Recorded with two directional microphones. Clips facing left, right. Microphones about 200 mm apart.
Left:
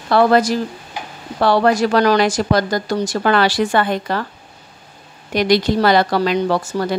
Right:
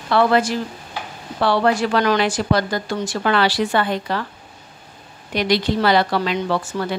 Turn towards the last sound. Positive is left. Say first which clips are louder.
# left 4 dB
turn(degrees=40)  # may be behind; listen again after turning